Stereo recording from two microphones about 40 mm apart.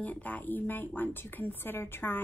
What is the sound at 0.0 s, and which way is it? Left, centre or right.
Speech, left.